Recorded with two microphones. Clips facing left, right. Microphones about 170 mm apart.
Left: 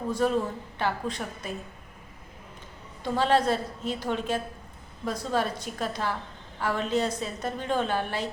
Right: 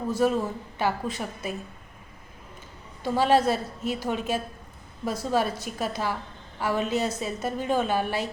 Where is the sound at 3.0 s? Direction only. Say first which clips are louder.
Right 2 dB; 10° right (ahead or behind).